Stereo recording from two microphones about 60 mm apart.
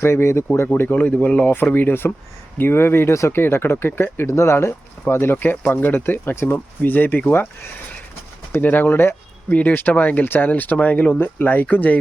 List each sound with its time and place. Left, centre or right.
0.0 s speech: left
0.7 s speech: left
1.7 s speech: left
4.3 s speech: left
8.6 s speech: left